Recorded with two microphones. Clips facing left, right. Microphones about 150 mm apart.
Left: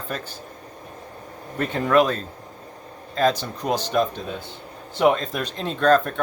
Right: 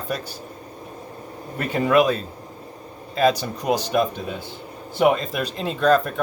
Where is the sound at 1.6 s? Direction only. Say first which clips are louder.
Right 1 dB; 10° right (ahead or behind).